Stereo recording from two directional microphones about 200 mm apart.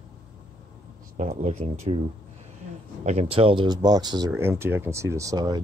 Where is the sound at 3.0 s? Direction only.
30° right (ahead or behind).